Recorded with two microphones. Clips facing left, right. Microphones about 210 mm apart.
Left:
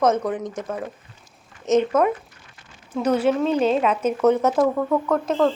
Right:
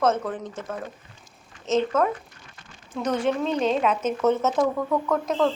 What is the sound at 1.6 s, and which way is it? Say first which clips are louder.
A woman's voice: left 4 dB; 15° left (ahead or behind).